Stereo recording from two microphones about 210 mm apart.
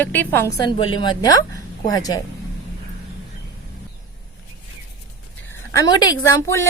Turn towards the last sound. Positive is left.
turn(degrees=15)  # may be behind; listen again after turning